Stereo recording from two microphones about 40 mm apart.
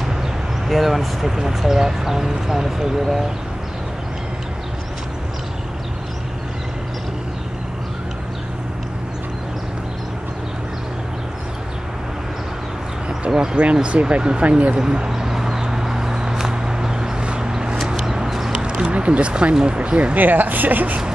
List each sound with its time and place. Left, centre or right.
0.7 s speech: centre
13.3 s speech: centre
13.8 s speech: right
14.8 s a sound: centre
18.5 s a sound: right
19.5 s speech: right
20.2 s speech: right